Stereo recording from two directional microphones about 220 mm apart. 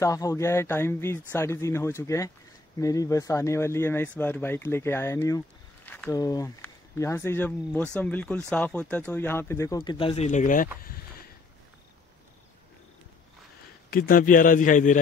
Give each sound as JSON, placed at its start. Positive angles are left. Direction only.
{"t": 0.0, "sound": "speech", "side_deg": 15}
{"t": 10.8, "sound": "a sound", "side_deg": 40}
{"t": 13.8, "sound": "a man's voice", "side_deg": 40}